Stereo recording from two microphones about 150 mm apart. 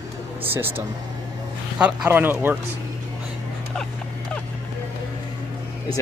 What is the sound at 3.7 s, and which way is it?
Speech, 5° left (ahead or behind).